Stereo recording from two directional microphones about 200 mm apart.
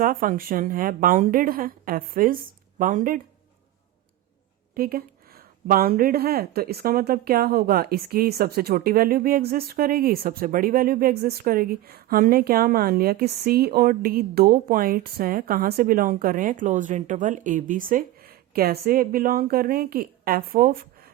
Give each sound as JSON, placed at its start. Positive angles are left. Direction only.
{"t": 0.0, "sound": "a woman's voice", "side_deg": -45}
{"t": 4.7, "sound": "a woman's voice", "side_deg": -50}